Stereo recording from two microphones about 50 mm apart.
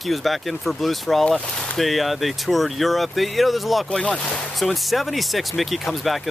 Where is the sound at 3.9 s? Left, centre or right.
Centre.